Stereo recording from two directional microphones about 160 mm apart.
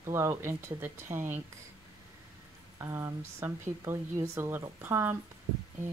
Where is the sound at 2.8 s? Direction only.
15° right (ahead or behind).